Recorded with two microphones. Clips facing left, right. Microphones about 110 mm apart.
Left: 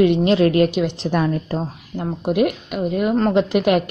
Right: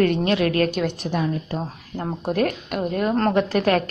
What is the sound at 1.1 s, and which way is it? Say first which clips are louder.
Speech: left 4 dB; 50° left (ahead or behind).